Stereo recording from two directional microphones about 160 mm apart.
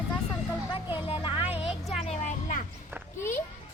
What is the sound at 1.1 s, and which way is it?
Speech, 30° left (ahead or behind).